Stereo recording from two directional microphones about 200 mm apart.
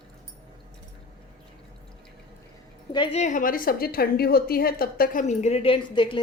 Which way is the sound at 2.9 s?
30° left (ahead or behind).